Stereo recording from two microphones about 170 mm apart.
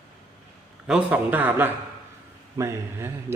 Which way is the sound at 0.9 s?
10° right (ahead or behind).